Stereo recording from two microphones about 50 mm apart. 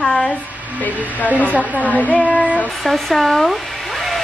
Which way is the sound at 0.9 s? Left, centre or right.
Right.